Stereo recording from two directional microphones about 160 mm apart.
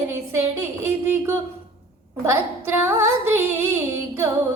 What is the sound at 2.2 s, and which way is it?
Speech, 15° right (ahead or behind).